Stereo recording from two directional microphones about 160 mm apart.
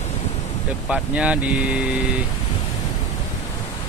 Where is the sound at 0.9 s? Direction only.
5° right (ahead or behind).